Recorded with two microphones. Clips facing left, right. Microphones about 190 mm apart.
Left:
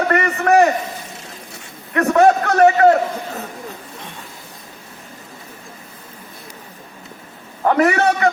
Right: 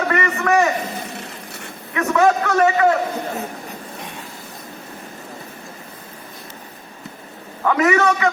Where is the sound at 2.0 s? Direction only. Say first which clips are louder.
Left 3 dB; 40° left (ahead or behind).